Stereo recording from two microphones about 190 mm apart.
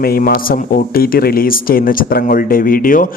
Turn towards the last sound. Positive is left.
turn(degrees=45)  # may be behind; listen again after turning